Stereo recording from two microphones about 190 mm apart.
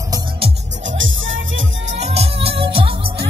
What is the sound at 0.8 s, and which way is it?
Music, 90° right.